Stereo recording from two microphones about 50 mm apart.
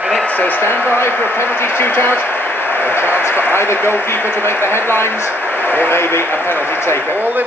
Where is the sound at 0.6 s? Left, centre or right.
Left.